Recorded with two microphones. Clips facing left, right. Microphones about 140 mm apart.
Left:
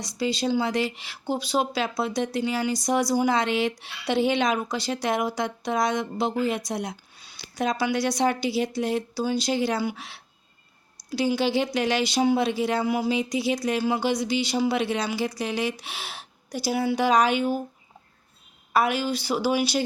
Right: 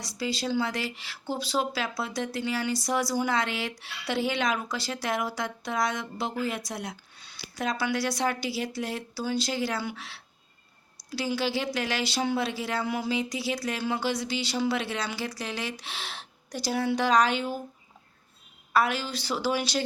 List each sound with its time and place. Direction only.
0.0 s speech: 20° left (ahead or behind)
18.7 s speech: 15° left (ahead or behind)